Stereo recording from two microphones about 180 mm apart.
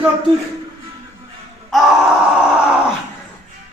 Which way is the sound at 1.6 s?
Centre (ahead or behind).